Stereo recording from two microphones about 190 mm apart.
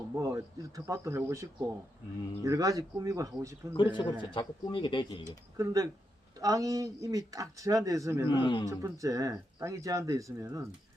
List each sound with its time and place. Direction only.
0.2 s speech: 15° right (ahead or behind)
3.8 s speech: 25° left (ahead or behind)
5.5 s speech: 15° right (ahead or behind)
8.3 s speech: 25° left (ahead or behind)
8.6 s speech: 15° right (ahead or behind)